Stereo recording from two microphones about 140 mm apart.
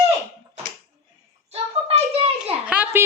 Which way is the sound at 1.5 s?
50° right (ahead or behind).